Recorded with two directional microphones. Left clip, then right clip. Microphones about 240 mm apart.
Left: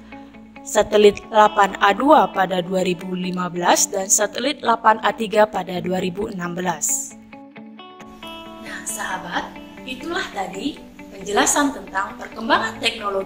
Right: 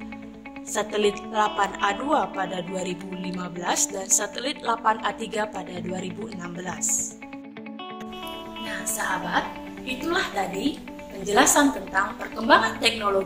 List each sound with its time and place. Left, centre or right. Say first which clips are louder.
0.7 s a woman's voice: left 10 dB; left
8.6 s music: even; centre
9.8 s a woman's voice: even; centre